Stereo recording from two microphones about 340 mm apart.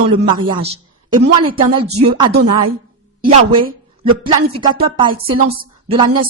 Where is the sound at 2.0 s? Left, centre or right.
Centre.